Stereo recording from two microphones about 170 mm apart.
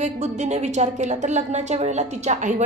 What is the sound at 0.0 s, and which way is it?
A woman's voice, 40° right (ahead or behind).